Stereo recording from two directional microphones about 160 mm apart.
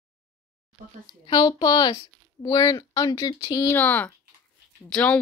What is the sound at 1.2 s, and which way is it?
Speech, 30° left (ahead or behind).